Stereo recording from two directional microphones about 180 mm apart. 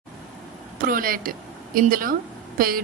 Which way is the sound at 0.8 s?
50° right (ahead or behind).